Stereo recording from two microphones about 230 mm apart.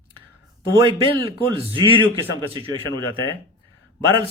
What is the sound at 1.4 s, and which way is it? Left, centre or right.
A man's voice, right.